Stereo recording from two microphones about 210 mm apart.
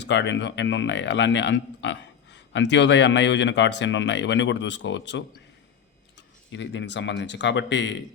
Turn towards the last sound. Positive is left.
turn(degrees=60)  # may be behind; listen again after turning